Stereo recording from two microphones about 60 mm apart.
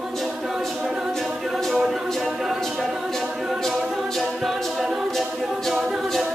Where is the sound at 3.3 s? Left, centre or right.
Centre.